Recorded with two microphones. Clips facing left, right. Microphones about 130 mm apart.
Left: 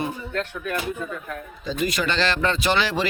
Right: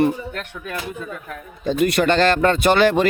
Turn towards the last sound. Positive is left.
turn(degrees=-50)  # may be behind; listen again after turning